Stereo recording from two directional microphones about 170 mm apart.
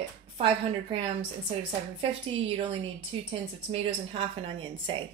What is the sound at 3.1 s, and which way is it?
A woman's voice, 30° right (ahead or behind).